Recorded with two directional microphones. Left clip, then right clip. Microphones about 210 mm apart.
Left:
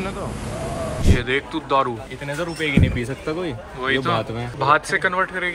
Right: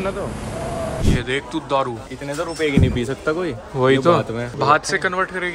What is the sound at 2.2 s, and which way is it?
Speech, 45° right (ahead or behind).